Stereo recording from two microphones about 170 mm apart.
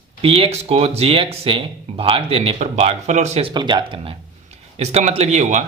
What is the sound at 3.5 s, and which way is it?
Speech, 25° right (ahead or behind).